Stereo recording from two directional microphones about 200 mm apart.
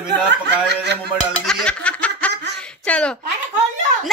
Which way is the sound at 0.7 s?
55° right (ahead or behind).